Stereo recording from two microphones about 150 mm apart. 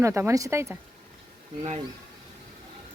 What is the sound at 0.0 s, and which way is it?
Speech, 20° right (ahead or behind).